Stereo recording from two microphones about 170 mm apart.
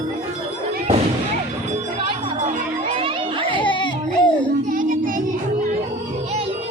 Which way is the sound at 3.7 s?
30° left (ahead or behind).